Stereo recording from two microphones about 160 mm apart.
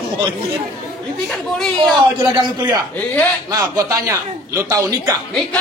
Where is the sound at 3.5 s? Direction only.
20° right (ahead or behind).